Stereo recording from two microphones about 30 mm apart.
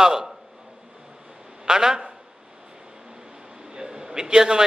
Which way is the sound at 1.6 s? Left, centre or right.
Right.